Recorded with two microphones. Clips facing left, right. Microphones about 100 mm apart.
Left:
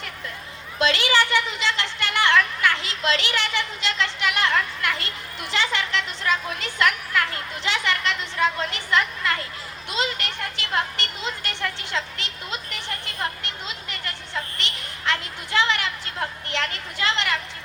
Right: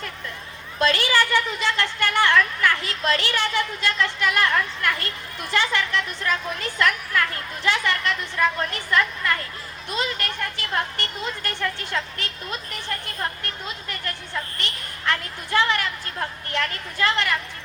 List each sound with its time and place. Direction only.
0.8 s a woman's voice: 20° left (ahead or behind)
13.1 s a sound: 20° left (ahead or behind)
14.6 s a child's voice: 20° left (ahead or behind)